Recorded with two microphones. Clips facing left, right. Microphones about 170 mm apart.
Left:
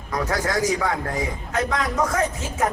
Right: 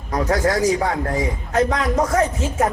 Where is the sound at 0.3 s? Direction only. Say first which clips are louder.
Right 5 dB; 30° right (ahead or behind).